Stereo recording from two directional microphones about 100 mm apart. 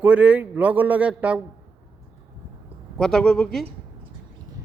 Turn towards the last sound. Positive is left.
turn(degrees=5)  # may be behind; listen again after turning